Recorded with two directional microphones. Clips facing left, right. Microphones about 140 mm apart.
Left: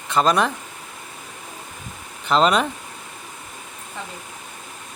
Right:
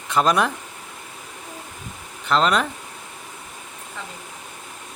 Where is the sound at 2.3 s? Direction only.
Centre (ahead or behind).